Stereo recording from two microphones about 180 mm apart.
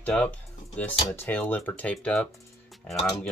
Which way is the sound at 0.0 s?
5° left (ahead or behind).